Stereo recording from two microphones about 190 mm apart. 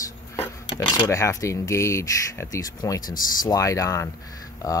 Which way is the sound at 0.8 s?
20° left (ahead or behind).